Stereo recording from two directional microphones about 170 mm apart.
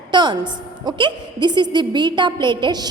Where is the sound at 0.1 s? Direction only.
25° right (ahead or behind).